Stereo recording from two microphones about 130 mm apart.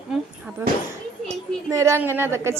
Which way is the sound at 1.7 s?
20° right (ahead or behind).